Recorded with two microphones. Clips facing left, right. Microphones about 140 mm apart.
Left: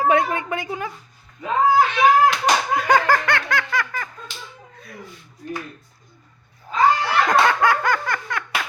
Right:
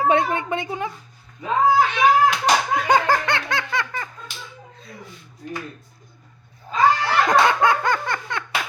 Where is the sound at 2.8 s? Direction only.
20° right (ahead or behind).